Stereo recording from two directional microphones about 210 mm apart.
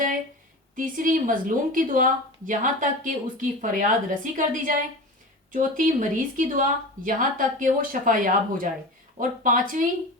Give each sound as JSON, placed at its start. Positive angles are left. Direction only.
{"t": 0.8, "sound": "speech", "side_deg": -40}